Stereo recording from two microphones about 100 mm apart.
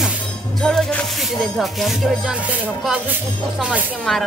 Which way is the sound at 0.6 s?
5° left (ahead or behind).